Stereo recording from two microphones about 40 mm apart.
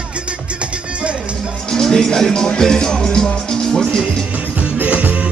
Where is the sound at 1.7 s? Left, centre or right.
Centre.